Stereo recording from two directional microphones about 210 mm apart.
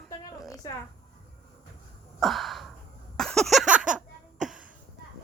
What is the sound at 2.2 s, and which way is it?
Gasp, centre (ahead or behind).